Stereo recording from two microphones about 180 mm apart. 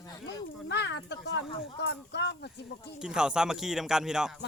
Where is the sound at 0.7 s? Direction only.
75° left (ahead or behind).